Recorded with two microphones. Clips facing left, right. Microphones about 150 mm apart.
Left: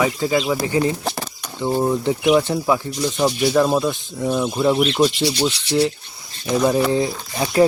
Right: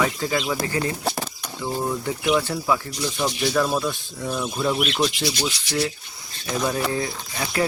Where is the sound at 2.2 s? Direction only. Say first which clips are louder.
Left 4 dB; 10° left (ahead or behind).